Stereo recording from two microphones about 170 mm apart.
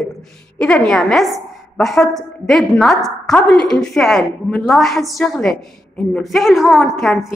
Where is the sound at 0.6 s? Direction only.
5° left (ahead or behind).